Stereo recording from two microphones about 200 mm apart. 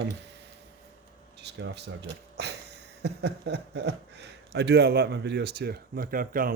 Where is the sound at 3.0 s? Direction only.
55° right (ahead or behind).